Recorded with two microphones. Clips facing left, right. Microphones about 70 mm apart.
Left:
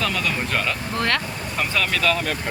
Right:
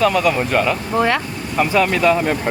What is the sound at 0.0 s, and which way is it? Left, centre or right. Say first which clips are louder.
Speech: right 9 dB; centre.